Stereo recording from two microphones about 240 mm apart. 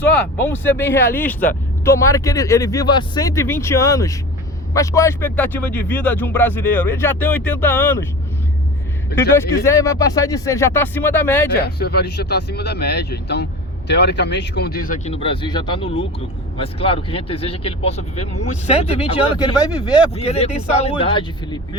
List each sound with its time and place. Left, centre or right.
0.4 s speech: centre
9.6 s speech: centre
11.5 s speech: left; by 21.8 s centre